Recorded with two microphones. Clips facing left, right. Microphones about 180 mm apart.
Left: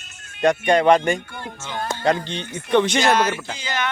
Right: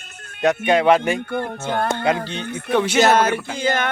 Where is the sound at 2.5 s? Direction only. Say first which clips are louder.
Right 5 dB; 60° right (ahead or behind).